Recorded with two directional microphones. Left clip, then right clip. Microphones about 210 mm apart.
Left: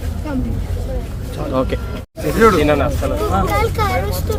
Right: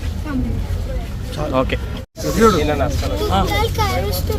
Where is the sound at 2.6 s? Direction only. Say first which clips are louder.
Left 4 dB; 50° left (ahead or behind).